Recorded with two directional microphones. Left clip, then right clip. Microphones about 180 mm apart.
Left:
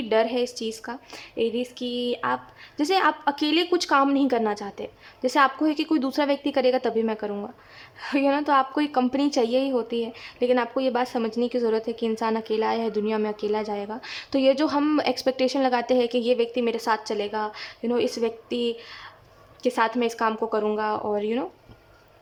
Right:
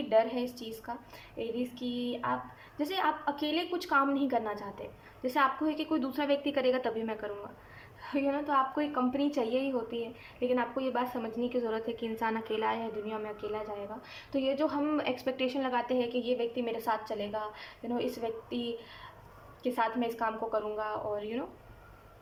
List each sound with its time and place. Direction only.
0.1 s a woman's voice: 50° left (ahead or behind)
8.0 s a woman's voice: 50° left (ahead or behind)